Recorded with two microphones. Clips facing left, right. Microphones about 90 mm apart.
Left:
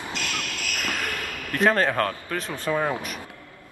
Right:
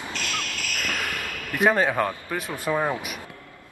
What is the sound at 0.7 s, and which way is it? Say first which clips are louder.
Cricket: even; 15° left (ahead or behind).